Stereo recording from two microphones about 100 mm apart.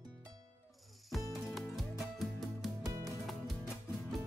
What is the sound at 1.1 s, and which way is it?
Music, centre (ahead or behind).